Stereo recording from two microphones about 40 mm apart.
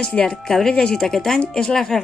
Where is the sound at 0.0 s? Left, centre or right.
Left.